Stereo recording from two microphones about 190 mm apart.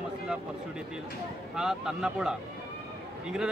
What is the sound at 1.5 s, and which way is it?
Speech, 5° right (ahead or behind).